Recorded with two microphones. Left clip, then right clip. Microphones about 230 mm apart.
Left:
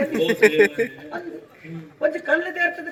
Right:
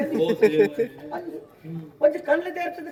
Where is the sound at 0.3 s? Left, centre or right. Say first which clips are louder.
Left 4 dB; centre.